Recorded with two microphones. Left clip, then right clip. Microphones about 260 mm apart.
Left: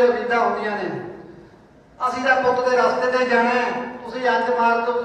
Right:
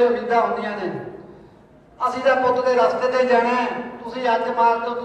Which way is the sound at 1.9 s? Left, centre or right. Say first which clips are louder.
Even; right.